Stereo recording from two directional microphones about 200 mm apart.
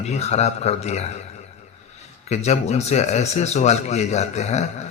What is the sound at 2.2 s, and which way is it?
A man's voice, 35° left (ahead or behind).